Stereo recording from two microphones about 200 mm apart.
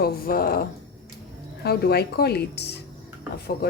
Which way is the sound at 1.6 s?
50° left (ahead or behind).